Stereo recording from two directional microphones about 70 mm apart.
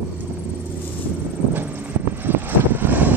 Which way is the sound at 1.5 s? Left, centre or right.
Right.